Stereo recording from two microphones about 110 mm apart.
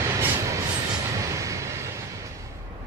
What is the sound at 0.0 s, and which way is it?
Train, 30° right (ahead or behind).